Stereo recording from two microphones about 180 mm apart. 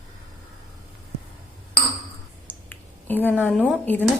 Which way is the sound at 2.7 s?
10° left (ahead or behind).